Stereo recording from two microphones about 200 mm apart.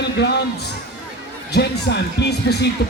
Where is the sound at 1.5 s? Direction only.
55° left (ahead or behind).